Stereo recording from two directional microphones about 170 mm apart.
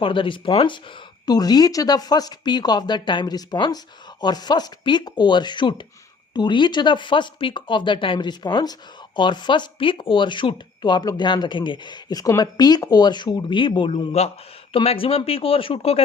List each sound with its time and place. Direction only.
0.0 s speech: 30° left (ahead or behind)